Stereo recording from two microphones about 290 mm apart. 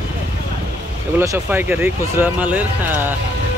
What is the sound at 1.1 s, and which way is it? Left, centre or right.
Speech, centre.